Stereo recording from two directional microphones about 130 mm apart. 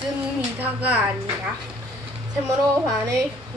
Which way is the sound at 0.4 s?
10° right (ahead or behind).